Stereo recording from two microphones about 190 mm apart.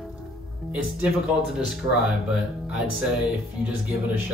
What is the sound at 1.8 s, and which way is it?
Speech, 25° right (ahead or behind).